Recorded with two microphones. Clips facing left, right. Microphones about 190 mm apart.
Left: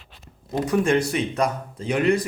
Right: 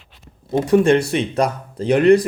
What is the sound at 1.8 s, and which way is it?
Speech, 65° right (ahead or behind).